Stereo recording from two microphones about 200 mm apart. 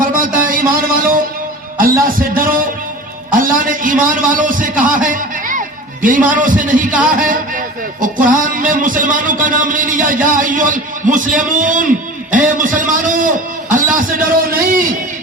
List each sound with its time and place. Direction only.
0.0 s music: 45° right (ahead or behind)
1.8 s a man's voice: 45° right (ahead or behind)
7.1 s music: 40° right (ahead or behind)